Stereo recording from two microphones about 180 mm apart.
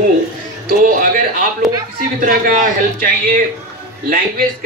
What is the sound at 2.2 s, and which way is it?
A man's voice, 50° right (ahead or behind).